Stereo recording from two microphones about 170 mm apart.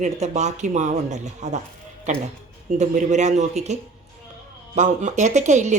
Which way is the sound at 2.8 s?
45° right (ahead or behind).